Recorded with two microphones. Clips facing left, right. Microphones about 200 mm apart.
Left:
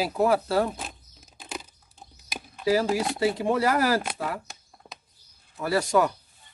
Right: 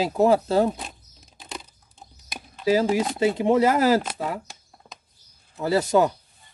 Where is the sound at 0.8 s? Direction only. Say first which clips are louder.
Even; 5° left (ahead or behind).